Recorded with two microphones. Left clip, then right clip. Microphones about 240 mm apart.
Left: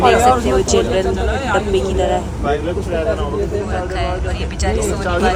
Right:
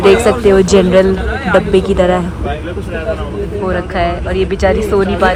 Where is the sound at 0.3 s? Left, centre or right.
Centre.